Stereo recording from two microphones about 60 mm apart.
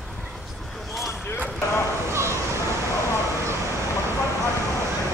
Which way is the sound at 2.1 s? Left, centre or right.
Right.